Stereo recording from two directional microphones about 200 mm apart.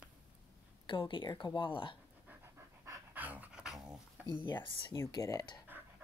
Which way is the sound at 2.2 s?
10° right (ahead or behind).